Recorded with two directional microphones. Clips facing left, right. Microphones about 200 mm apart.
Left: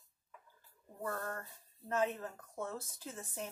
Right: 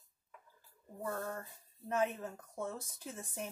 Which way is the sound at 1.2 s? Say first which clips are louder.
Right 1 dB; 10° right (ahead or behind).